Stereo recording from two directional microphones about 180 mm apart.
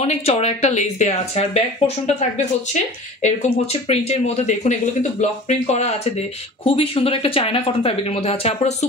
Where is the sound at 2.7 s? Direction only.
40° left (ahead or behind).